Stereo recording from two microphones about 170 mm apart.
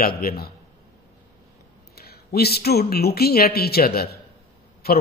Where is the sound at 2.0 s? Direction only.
65° left (ahead or behind).